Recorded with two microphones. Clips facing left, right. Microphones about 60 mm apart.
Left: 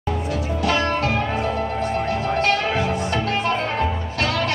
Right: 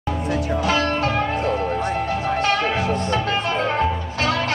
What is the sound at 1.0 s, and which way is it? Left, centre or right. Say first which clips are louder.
Music: right 1 dB; right.